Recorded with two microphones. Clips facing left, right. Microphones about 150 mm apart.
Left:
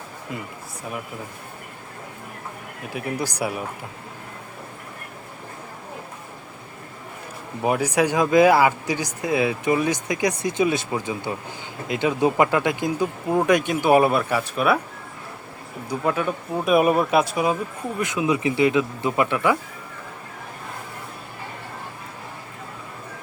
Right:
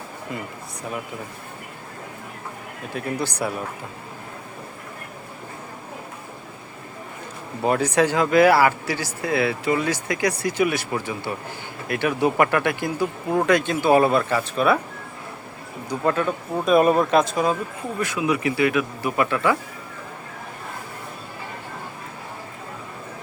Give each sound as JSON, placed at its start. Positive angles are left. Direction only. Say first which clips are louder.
{"t": 2.9, "sound": "speech", "louder": "right 1 dB", "side_deg": 10}
{"t": 7.6, "sound": "speech", "louder": "right 1 dB", "side_deg": 10}
{"t": 15.9, "sound": "speech", "louder": "right 1 dB", "side_deg": 10}